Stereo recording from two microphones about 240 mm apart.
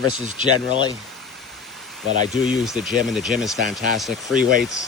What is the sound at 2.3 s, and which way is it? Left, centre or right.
Speech, centre.